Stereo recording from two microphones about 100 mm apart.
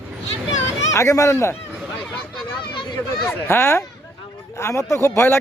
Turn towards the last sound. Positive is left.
turn(degrees=25)  # may be behind; listen again after turning